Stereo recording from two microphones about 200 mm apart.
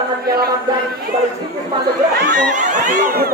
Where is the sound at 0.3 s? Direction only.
50° right (ahead or behind).